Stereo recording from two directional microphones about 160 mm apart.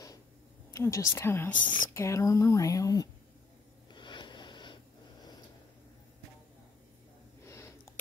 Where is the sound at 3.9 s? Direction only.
30° left (ahead or behind).